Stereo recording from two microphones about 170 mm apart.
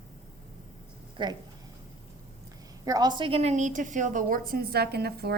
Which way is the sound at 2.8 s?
25° right (ahead or behind).